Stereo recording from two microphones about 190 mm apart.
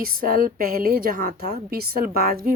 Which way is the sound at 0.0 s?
50° right (ahead or behind).